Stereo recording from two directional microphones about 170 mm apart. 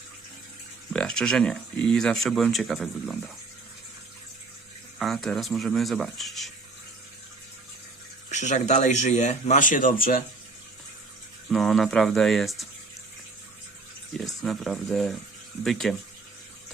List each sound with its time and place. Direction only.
0.9 s speech: 5° left (ahead or behind)
4.9 s speech: centre (ahead or behind)
8.3 s speech: 45° left (ahead or behind)
11.4 s speech: centre (ahead or behind)
14.4 s speech: centre (ahead or behind)